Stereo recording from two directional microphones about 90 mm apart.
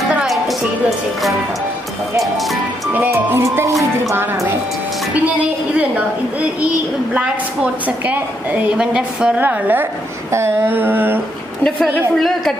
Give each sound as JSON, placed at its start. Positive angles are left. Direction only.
{"t": 0.3, "sound": "music", "side_deg": 0}
{"t": 2.3, "sound": "speech", "side_deg": 0}
{"t": 3.2, "sound": "a sound", "side_deg": -25}
{"t": 5.1, "sound": "a woman's voice", "side_deg": -15}
{"t": 7.2, "sound": "a woman's voice", "side_deg": -15}
{"t": 9.4, "sound": "a sound", "side_deg": -20}
{"t": 11.6, "sound": "a woman's voice", "side_deg": 5}